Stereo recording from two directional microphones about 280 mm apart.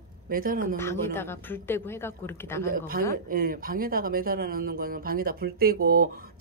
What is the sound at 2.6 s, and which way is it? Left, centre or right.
Speech, right.